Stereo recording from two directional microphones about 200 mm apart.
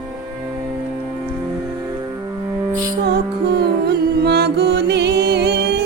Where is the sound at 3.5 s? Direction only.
55° right (ahead or behind).